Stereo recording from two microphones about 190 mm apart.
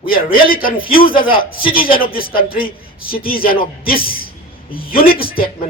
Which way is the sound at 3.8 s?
50° left (ahead or behind).